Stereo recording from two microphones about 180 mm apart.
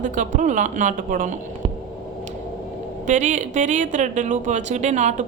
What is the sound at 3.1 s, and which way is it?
Speech, 40° right (ahead or behind).